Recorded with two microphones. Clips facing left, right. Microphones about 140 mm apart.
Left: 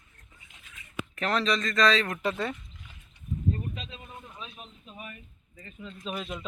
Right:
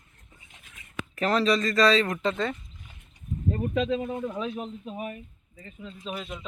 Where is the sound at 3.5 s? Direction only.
80° right.